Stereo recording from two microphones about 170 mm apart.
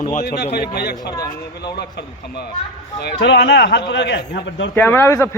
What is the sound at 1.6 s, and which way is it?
A man's voice, 75° left (ahead or behind).